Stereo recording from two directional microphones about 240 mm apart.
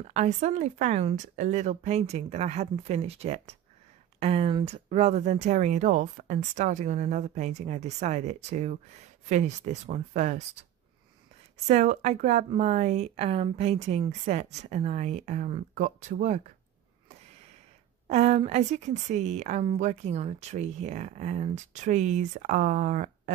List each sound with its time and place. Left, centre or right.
0.0 s a woman's voice: right
11.6 s a woman's voice: right
18.0 s a woman's voice: right